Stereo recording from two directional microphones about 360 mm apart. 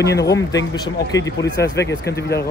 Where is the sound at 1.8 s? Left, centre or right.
Left.